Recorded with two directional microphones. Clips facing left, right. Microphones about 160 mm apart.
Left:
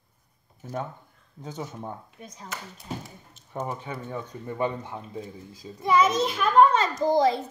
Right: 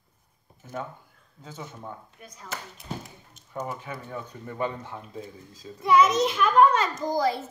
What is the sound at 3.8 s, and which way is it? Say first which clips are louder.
A child's voice: left 2 dB; 25° left (ahead or behind).